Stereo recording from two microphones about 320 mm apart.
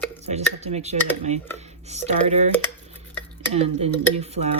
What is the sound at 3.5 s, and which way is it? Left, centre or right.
Speech, centre.